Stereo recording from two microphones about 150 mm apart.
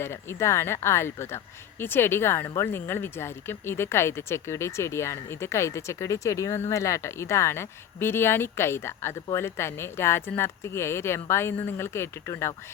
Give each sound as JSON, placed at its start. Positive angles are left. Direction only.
{"t": 0.0, "sound": "speech", "side_deg": 15}